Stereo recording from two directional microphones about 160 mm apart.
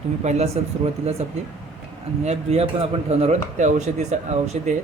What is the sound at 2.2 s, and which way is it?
Speech, 40° right (ahead or behind).